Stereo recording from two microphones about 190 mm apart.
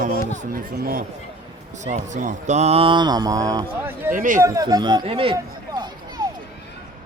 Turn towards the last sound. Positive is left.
turn(degrees=-20)  # may be behind; listen again after turning